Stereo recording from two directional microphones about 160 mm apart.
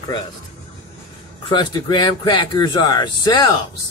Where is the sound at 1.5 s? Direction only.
30° left (ahead or behind).